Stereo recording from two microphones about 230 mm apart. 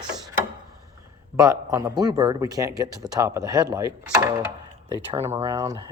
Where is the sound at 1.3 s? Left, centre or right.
Centre.